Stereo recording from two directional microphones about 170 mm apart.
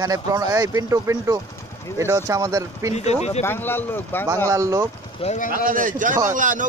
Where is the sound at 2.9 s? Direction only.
40° left (ahead or behind).